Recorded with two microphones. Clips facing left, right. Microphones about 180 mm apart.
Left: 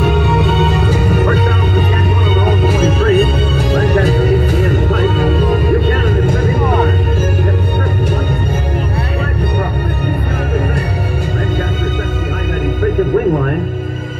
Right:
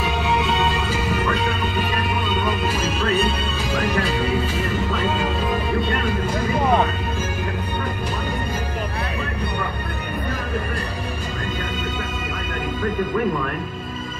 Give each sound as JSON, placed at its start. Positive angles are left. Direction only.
{"t": 0.0, "sound": "music", "side_deg": 50}
{"t": 2.4, "sound": "music", "side_deg": 55}